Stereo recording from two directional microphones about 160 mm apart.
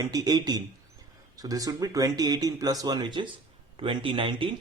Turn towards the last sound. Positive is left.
turn(degrees=-35)  # may be behind; listen again after turning